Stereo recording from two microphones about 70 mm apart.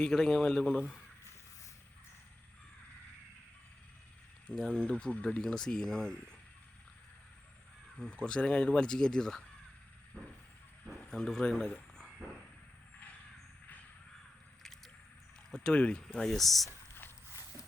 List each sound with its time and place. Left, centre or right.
0.0 s speech: centre
4.4 s speech: centre
7.9 s speech: centre
11.1 s speech: centre
15.5 s speech: centre
16.6 s a sound: left